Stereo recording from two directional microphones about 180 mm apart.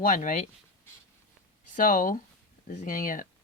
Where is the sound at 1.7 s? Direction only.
50° left (ahead or behind).